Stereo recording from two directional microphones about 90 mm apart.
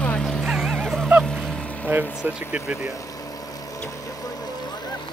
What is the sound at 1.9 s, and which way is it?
Speech, 25° right (ahead or behind).